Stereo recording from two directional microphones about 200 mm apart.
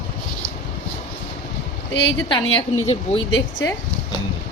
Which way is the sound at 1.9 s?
60° left (ahead or behind).